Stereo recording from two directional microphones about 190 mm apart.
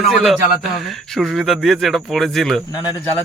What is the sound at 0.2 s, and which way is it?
Speech, centre (ahead or behind).